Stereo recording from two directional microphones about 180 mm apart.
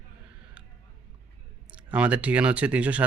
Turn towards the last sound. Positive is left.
turn(degrees=-5)  # may be behind; listen again after turning